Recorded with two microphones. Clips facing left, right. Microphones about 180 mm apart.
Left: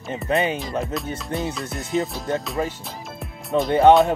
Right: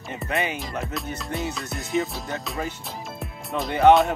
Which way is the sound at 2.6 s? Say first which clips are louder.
Left 3 dB; 30° left (ahead or behind).